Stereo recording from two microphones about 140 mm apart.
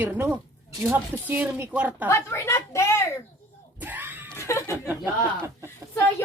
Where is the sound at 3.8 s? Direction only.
15° right (ahead or behind).